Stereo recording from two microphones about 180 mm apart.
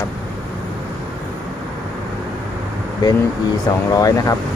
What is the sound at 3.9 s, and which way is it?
Speech, 20° left (ahead or behind).